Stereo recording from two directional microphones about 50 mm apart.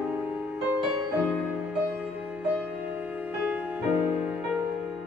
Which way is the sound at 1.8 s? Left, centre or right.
Right.